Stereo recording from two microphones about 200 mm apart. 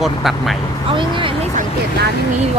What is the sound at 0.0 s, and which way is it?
Speech, centre (ahead or behind).